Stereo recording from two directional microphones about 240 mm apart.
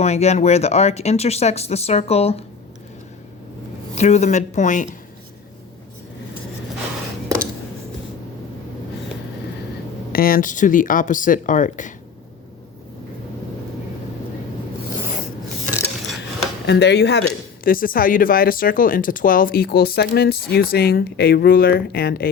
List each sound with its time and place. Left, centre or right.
0.0 s speech: left
3.9 s speech: left
10.1 s speech: left
16.6 s speech: left